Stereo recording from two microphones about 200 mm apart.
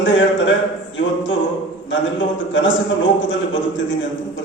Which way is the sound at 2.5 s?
70° left (ahead or behind).